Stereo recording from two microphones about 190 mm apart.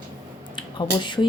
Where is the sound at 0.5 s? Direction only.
25° left (ahead or behind).